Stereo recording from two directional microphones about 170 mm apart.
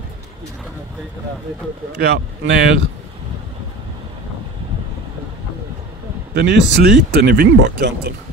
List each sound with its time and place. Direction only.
2.0 s speech: 70° right (ahead or behind)
6.3 s speech: 75° right (ahead or behind)